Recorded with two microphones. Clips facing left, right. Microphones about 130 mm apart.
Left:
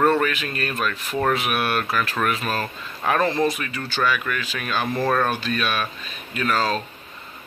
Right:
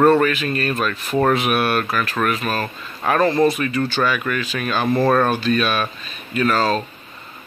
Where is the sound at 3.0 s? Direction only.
5° left (ahead or behind).